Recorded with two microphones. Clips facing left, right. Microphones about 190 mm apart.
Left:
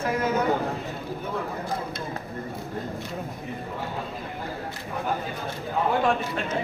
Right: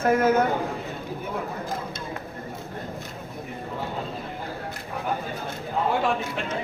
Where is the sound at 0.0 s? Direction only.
50° right (ahead or behind).